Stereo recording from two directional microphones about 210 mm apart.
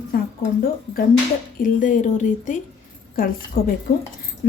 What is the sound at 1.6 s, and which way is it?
A woman's voice, 40° left (ahead or behind).